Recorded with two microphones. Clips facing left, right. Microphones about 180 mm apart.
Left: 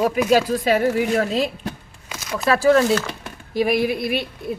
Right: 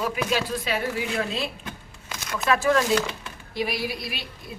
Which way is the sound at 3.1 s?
45° left (ahead or behind).